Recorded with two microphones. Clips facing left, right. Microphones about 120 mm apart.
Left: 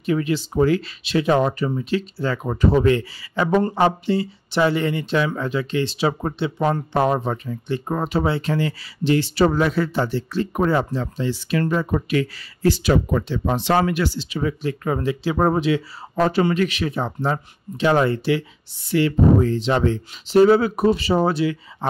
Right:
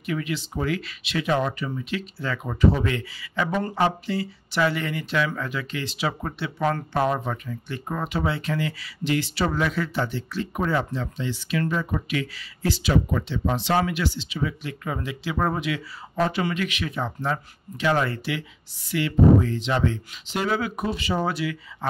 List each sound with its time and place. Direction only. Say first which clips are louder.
0.0 s speech: left 7 dB; 30° left (ahead or behind)